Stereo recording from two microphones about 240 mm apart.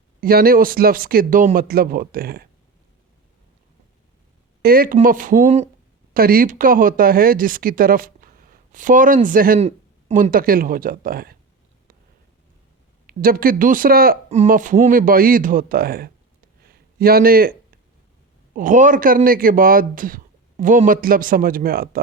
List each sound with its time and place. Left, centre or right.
0.2 s a man's voice: right
4.6 s a man's voice: right
13.1 s a man's voice: right
16.6 s a sound: right
18.5 s a man's voice: right